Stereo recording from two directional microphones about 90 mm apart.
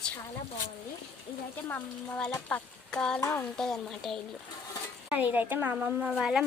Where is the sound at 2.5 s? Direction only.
10° left (ahead or behind).